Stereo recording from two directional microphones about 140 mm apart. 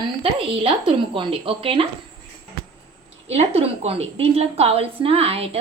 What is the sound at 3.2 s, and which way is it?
A woman's voice, 50° right (ahead or behind).